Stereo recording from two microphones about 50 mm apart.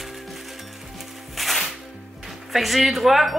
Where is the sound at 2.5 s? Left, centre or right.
Centre.